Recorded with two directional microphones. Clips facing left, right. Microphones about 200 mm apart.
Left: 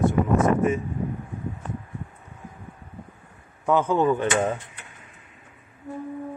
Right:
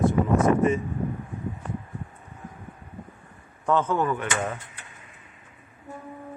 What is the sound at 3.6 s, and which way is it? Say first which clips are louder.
Speech: left 3 dB; 10° left (ahead or behind).